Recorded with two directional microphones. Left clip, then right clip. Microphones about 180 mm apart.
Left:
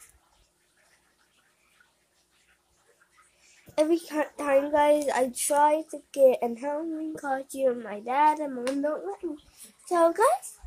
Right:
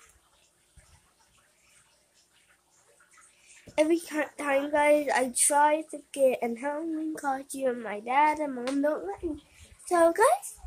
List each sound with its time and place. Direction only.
3.7 s a woman's voice: 5° right (ahead or behind)